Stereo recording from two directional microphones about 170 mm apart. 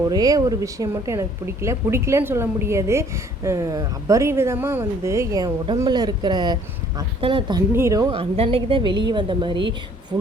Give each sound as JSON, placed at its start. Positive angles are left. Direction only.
{"t": 0.1, "sound": "a woman's voice", "side_deg": -20}
{"t": 7.7, "sound": "a woman's voice", "side_deg": -15}
{"t": 8.1, "sound": "a woman's voice", "side_deg": -35}